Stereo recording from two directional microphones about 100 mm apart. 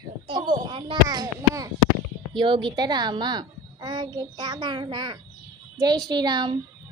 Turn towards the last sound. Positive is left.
turn(degrees=-45)  # may be behind; listen again after turning